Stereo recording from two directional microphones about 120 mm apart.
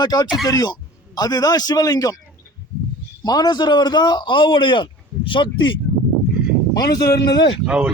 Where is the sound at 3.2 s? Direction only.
35° left (ahead or behind).